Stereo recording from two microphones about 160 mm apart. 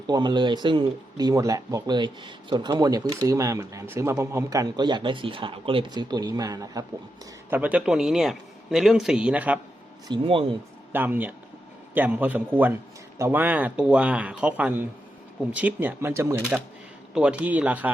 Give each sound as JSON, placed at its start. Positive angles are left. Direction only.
{"t": 0.1, "sound": "speech", "side_deg": -25}
{"t": 7.5, "sound": "a man's voice", "side_deg": -10}
{"t": 10.1, "sound": "speech", "side_deg": -30}
{"t": 10.9, "sound": "speech", "side_deg": -10}